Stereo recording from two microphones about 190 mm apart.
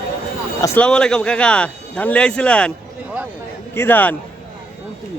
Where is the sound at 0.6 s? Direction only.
10° left (ahead or behind).